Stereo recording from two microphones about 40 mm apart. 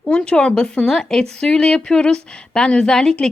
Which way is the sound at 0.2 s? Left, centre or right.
Left.